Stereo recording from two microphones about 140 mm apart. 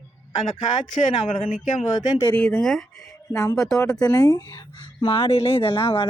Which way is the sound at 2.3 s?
5° left (ahead or behind).